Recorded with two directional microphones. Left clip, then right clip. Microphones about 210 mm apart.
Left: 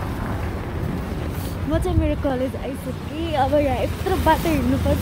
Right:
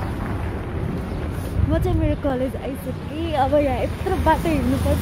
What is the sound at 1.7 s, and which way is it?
A woman's voice, centre (ahead or behind).